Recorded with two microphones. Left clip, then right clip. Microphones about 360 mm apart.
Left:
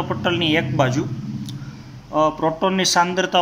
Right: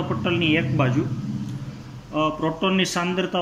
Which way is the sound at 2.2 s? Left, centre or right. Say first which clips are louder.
Left 4 dB; centre.